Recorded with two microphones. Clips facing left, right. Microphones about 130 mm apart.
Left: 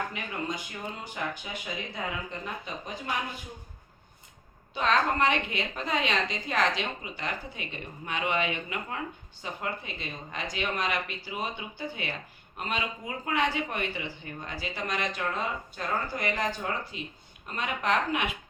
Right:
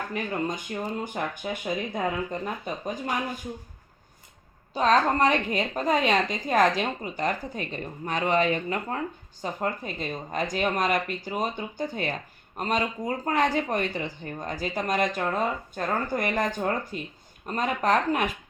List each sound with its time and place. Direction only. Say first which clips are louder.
0.1 s speech: right 5 dB; 45° right (ahead or behind)
4.7 s a woman's voice: right 4 dB; 40° right (ahead or behind)